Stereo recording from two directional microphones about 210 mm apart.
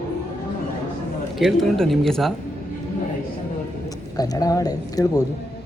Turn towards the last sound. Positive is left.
turn(degrees=15)  # may be behind; listen again after turning